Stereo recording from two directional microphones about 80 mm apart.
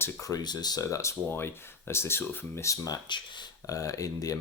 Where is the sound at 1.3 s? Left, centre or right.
Left.